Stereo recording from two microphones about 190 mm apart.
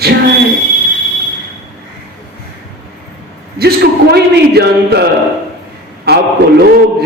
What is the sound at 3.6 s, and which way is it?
A man's voice, 55° right (ahead or behind).